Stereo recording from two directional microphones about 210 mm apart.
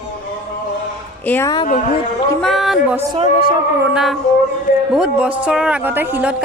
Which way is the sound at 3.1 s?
25° right (ahead or behind).